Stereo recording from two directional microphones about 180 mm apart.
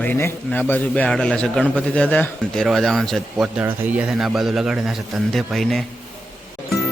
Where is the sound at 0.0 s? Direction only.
10° left (ahead or behind).